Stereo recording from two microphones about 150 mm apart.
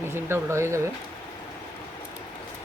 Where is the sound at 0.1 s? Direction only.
15° right (ahead or behind).